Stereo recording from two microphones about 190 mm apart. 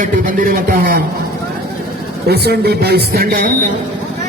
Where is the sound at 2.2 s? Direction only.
55° right (ahead or behind).